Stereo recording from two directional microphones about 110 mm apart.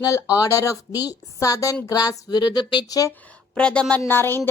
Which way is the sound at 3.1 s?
15° left (ahead or behind).